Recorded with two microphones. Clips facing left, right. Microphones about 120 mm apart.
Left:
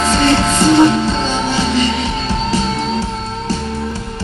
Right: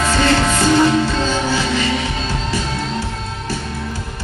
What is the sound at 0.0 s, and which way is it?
Music, 20° left (ahead or behind).